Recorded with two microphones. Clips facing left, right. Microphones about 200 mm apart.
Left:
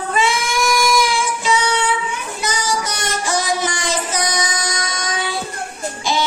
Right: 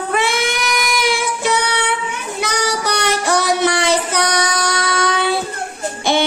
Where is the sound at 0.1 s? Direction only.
60° right (ahead or behind).